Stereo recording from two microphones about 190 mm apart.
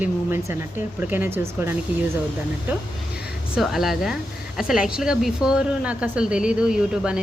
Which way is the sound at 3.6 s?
Centre (ahead or behind).